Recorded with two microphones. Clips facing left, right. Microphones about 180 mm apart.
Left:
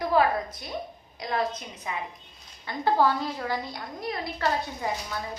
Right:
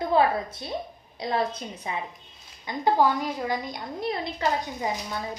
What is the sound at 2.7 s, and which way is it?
A woman's voice, 15° right (ahead or behind).